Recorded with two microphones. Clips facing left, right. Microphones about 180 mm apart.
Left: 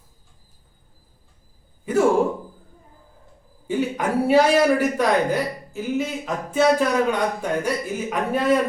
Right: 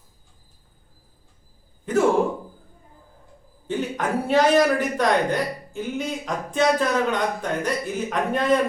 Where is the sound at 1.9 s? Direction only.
10° left (ahead or behind).